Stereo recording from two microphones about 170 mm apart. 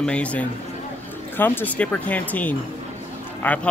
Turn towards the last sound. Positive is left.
turn(degrees=10)  # may be behind; listen again after turning